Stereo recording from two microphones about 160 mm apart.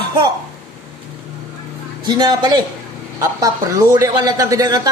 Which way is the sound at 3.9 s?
20° right (ahead or behind).